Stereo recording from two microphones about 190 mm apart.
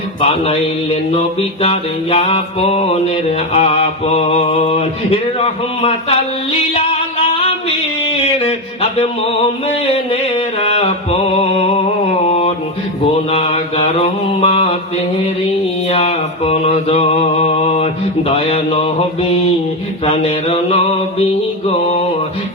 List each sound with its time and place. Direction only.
0.2 s mantra: 30° left (ahead or behind)
8.4 s a sound: 30° left (ahead or behind)
13.3 s mantra: 35° left (ahead or behind)
15.9 s mantra: 35° left (ahead or behind)